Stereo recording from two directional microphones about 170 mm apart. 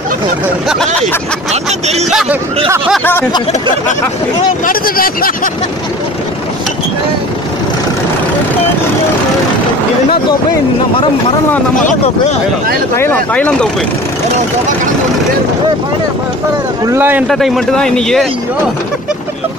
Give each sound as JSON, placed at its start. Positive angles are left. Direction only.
{"t": 1.5, "sound": "speech", "side_deg": -40}
{"t": 2.0, "sound": "speech", "side_deg": -5}
{"t": 4.6, "sound": "speech", "side_deg": 60}
{"t": 11.7, "sound": "speech", "side_deg": 50}
{"t": 12.9, "sound": "speech", "side_deg": 10}
{"t": 16.8, "sound": "speech", "side_deg": -15}
{"t": 17.3, "sound": "speech", "side_deg": 0}